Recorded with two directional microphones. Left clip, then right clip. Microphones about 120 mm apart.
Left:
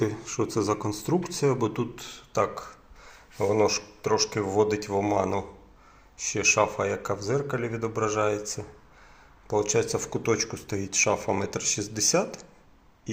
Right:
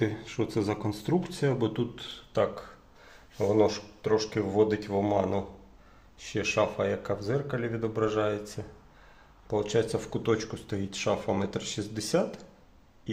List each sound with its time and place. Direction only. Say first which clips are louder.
0.0 s speech: left 3 dB; 25° right (ahead or behind)